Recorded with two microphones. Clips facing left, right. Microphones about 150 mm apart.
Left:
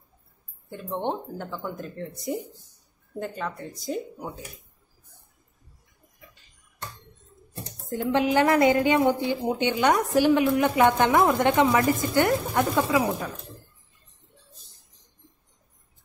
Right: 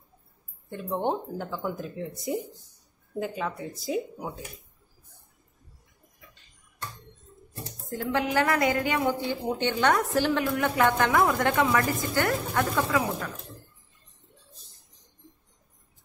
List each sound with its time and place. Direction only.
0.7 s speech: centre (ahead or behind)
7.9 s a woman's voice: 20° left (ahead or behind)